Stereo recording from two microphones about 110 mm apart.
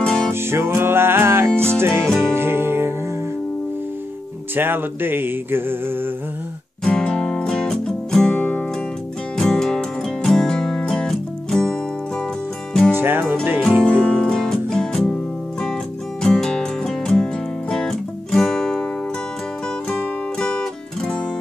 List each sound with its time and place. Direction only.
0.0 s music: 5° left (ahead or behind)
0.3 s music: 25° right (ahead or behind)
4.6 s music: 20° right (ahead or behind)
6.8 s music: 5° left (ahead or behind)
12.9 s music: 20° right (ahead or behind)
14.0 s music: 5° left (ahead or behind)
16.2 s music: 5° left (ahead or behind)
19.9 s music: 10° left (ahead or behind)